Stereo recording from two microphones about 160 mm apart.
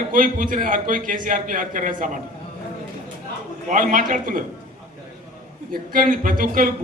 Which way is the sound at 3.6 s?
55° right (ahead or behind).